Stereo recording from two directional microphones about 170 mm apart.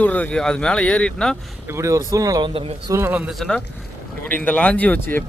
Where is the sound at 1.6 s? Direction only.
15° right (ahead or behind).